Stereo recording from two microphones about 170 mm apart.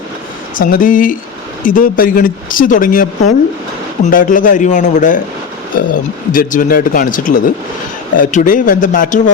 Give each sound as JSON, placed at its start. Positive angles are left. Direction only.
{"t": 0.5, "sound": "speech", "side_deg": 55}